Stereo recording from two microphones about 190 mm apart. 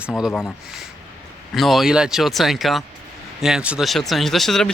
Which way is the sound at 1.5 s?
Centre (ahead or behind).